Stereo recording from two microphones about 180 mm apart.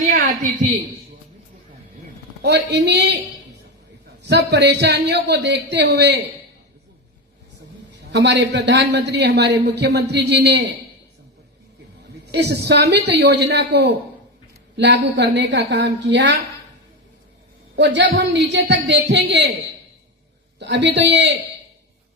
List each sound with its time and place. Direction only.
2.4 s a man's voice: 65° right (ahead or behind)
4.3 s a man's voice: 70° right (ahead or behind)
8.1 s a man's voice: 75° right (ahead or behind)
12.3 s a man's voice: 65° right (ahead or behind)
17.7 s a man's voice: 75° right (ahead or behind)
20.6 s a man's voice: 75° right (ahead or behind)